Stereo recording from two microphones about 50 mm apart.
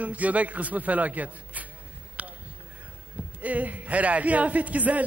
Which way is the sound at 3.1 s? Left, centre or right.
Right.